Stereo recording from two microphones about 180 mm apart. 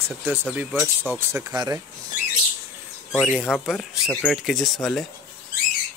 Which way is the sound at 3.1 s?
5° left (ahead or behind).